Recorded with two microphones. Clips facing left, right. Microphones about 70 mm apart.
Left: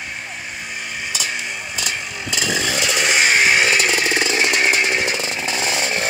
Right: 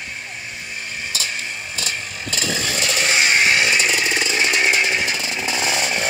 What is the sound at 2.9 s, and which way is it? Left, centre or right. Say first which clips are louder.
Chainsaw: left 1 dB; centre.